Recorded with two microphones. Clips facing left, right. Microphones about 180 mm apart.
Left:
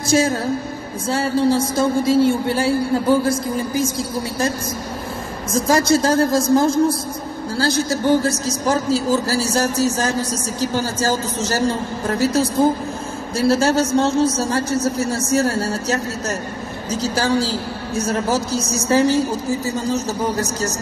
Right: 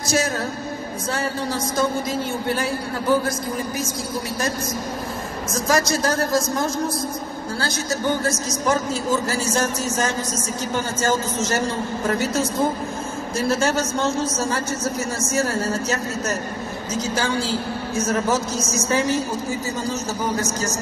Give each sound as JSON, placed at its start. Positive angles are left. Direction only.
{"t": 0.0, "sound": "a woman's voice", "side_deg": 30}
{"t": 5.5, "sound": "a woman's voice", "side_deg": 30}
{"t": 8.2, "sound": "a man's voice", "side_deg": 35}